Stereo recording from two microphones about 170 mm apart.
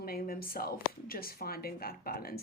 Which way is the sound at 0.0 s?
60° left (ahead or behind).